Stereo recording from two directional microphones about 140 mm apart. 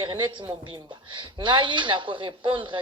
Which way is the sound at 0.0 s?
35° right (ahead or behind).